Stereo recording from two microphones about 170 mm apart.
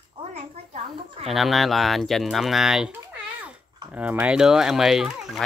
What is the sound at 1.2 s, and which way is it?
Speech, centre (ahead or behind).